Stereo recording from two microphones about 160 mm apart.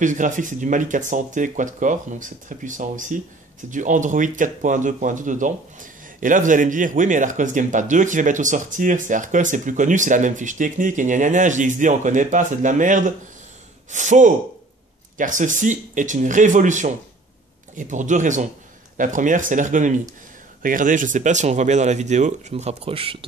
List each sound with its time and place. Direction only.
0.0 s speech: 55° right (ahead or behind); by 23.1 s 35° right (ahead or behind)